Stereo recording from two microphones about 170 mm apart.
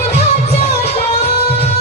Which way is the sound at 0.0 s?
40° left (ahead or behind).